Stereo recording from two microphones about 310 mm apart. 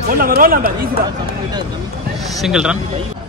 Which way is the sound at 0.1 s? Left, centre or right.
Right.